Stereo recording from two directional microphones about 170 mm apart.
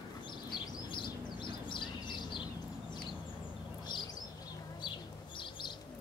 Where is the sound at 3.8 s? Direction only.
25° left (ahead or behind).